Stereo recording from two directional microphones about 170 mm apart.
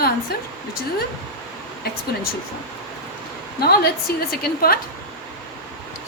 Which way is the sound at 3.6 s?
65° left (ahead or behind).